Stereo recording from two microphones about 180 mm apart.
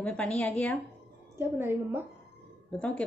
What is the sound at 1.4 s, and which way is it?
Speech, 10° right (ahead or behind).